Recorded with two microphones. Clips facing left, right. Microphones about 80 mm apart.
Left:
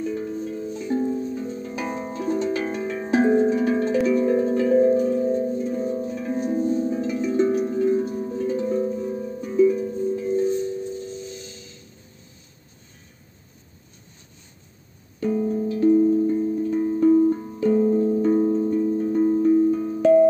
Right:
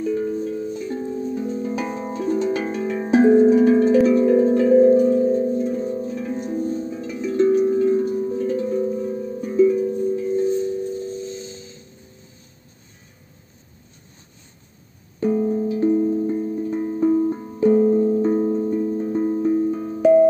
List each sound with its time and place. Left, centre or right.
0.0 s music: centre
0.8 s music: centre
1.3 s music: centre
1.8 s harp: centre
6.7 s singing bowl: centre
7.0 s music: centre
15.2 s music: centre